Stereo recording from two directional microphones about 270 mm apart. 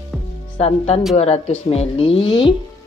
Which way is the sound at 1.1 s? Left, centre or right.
Left.